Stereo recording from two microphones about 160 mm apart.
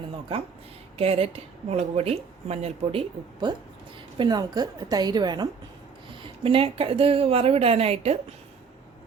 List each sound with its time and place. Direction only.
0.9 s a woman's voice: 35° right (ahead or behind)
4.2 s a woman's voice: 25° right (ahead or behind); by 8.2 s 40° right (ahead or behind)